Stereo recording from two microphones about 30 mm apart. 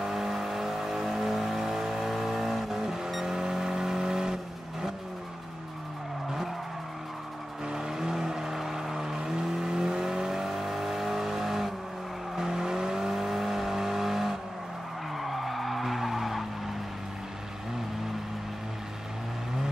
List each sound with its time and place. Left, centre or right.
0.0 s vehicle: centre
7.6 s vehicle: right
15.1 s skidding: centre